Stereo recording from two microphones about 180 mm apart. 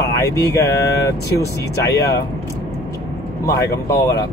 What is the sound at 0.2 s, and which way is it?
Speech, 15° left (ahead or behind).